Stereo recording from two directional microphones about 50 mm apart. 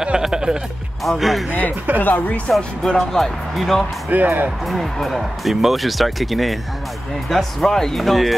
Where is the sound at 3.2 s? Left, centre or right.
Centre.